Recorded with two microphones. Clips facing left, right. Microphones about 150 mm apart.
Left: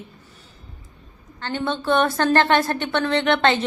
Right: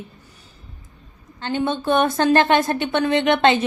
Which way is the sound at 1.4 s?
15° right (ahead or behind).